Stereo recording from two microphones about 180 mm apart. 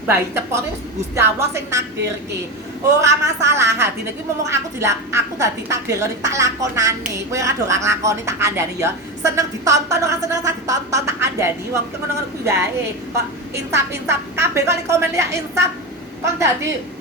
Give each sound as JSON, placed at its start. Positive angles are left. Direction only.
{"t": 0.1, "sound": "a woman's voice", "side_deg": -15}
{"t": 3.0, "sound": "a woman's voice", "side_deg": -15}
{"t": 13.7, "sound": "a woman's voice", "side_deg": -15}